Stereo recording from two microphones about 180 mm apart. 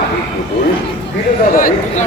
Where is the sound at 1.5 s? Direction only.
50° left (ahead or behind).